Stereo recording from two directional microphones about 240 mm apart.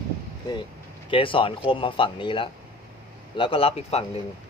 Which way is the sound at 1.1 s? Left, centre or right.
Left.